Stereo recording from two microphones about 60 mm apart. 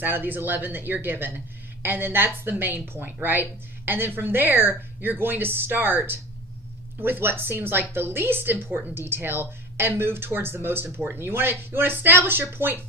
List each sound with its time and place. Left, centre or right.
0.0 s speech: right